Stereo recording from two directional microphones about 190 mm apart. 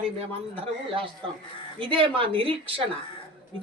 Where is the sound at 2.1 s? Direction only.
30° right (ahead or behind).